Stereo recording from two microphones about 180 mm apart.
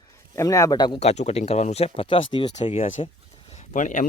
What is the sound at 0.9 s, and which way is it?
Speech, 35° left (ahead or behind).